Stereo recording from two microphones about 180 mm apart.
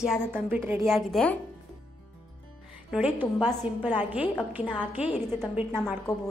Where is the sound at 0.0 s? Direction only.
5° right (ahead or behind).